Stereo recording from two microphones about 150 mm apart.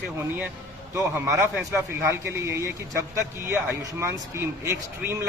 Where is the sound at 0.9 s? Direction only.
20° right (ahead or behind).